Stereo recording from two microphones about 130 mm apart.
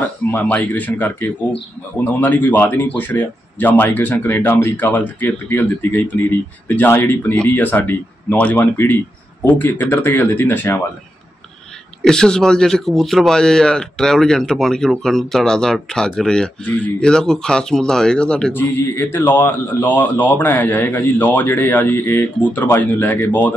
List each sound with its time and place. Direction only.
0.3 s speech: 15° left (ahead or behind)
12.0 s speech: 5° left (ahead or behind)